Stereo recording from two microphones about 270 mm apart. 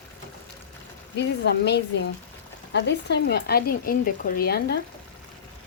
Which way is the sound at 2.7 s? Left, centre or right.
Left.